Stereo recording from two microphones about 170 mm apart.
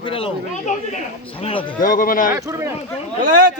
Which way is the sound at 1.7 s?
55° left (ahead or behind).